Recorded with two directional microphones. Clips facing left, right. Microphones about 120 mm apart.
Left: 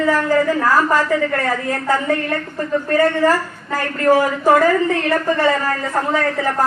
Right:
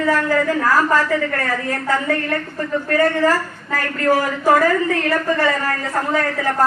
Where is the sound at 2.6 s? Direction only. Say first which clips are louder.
Left 2 dB; 30° left (ahead or behind).